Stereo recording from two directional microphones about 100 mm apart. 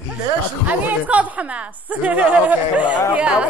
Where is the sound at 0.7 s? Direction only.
15° right (ahead or behind).